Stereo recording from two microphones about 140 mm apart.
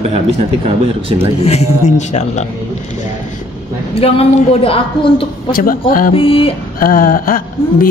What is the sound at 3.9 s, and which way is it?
A woman's voice, 45° left (ahead or behind).